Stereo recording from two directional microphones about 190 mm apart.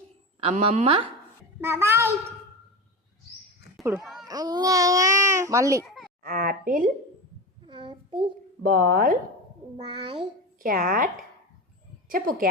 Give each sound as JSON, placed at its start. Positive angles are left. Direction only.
{"t": 0.3, "sound": "a woman's voice", "side_deg": -30}
{"t": 1.6, "sound": "speech", "side_deg": -10}
{"t": 3.9, "sound": "a child's voice", "side_deg": 0}
{"t": 4.3, "sound": "speech", "side_deg": -20}
{"t": 5.8, "sound": "a sound", "side_deg": 0}
{"t": 6.2, "sound": "a woman's voice", "side_deg": -50}
{"t": 7.6, "sound": "child singing", "side_deg": -25}
{"t": 8.6, "sound": "a woman's voice", "side_deg": -50}
{"t": 9.7, "sound": "a child's voice", "side_deg": -25}
{"t": 10.6, "sound": "a woman's voice", "side_deg": -50}